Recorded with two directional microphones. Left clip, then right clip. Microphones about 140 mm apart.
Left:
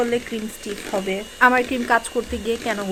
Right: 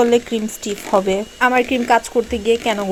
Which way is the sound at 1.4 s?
25° right (ahead or behind).